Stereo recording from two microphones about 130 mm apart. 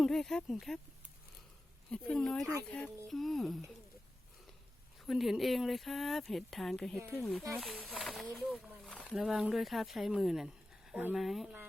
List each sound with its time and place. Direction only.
0.0 s speech: 5° left (ahead or behind)
1.9 s speech: 5° left (ahead or behind)
4.9 s speech: centre (ahead or behind)